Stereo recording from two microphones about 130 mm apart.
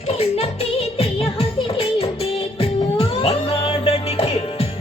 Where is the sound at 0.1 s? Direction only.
50° left (ahead or behind).